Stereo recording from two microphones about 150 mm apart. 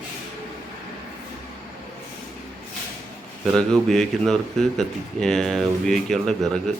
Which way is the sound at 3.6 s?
5° left (ahead or behind).